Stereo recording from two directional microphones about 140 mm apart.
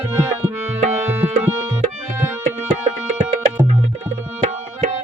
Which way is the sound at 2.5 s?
50° right (ahead or behind).